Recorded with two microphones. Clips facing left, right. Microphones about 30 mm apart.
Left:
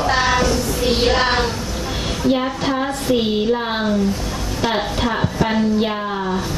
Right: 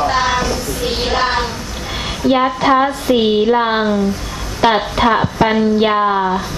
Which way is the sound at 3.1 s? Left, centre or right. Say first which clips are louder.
Right 4 dB; centre.